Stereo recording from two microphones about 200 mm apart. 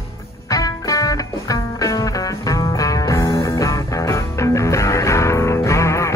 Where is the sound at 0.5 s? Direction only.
15° left (ahead or behind).